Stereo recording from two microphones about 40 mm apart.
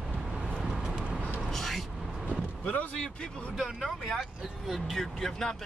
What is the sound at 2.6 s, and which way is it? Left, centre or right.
Speech, left.